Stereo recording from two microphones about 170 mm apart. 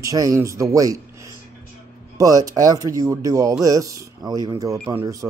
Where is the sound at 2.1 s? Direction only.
20° right (ahead or behind).